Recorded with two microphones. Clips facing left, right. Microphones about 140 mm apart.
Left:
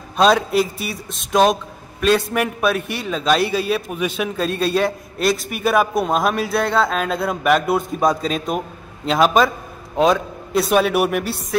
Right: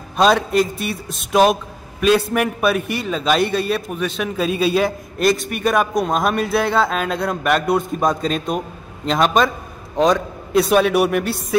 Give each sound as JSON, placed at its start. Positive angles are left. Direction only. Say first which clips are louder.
{"t": 0.2, "sound": "a man's voice", "louder": "even", "side_deg": 0}